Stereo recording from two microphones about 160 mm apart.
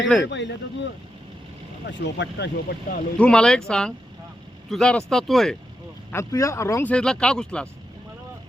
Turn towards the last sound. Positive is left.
turn(degrees=5)  # may be behind; listen again after turning